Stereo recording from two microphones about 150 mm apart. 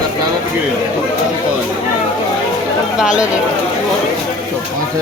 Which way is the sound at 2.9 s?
5° right (ahead or behind).